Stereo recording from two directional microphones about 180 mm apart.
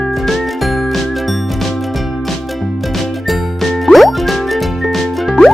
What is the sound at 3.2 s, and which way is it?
Music, centre (ahead or behind).